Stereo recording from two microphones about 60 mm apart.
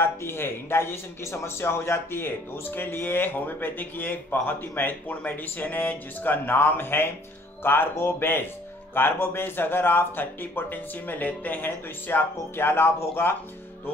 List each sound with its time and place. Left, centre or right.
0.0 s a man's voice: left